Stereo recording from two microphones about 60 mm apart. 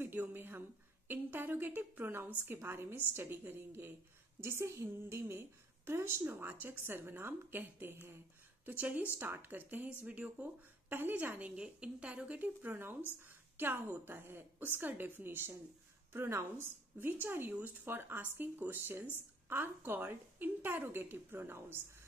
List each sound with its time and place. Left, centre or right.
0.0 s a woman's voice: right
4.4 s a woman's voice: right
8.6 s a woman's voice: right
10.9 s a woman's voice: right
11.5 s a woman's voice: centre
13.6 s a woman's voice: right